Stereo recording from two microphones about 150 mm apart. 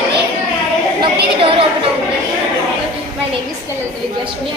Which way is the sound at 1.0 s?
35° right (ahead or behind).